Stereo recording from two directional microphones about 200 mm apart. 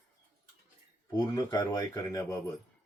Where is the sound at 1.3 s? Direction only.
20° left (ahead or behind).